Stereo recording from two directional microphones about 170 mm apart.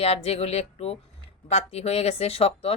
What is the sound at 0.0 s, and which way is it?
Speech, 35° left (ahead or behind).